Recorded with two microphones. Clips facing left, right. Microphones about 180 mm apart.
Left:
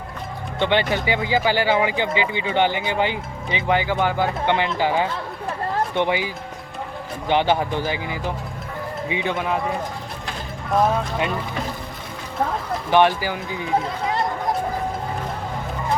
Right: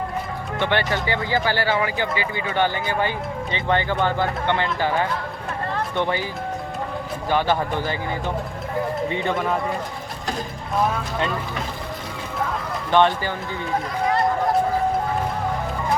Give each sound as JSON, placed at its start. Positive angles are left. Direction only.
{"t": 0.6, "sound": "speech", "side_deg": 15}
{"t": 7.3, "sound": "speech", "side_deg": 20}
{"t": 9.0, "sound": "a man's voice", "side_deg": 5}
{"t": 12.9, "sound": "speech", "side_deg": 10}